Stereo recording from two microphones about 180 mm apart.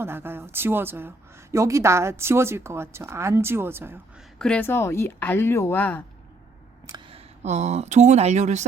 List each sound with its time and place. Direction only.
0.0 s speech: 10° right (ahead or behind)
4.4 s speech: 5° left (ahead or behind)
6.8 s speech: 25° right (ahead or behind)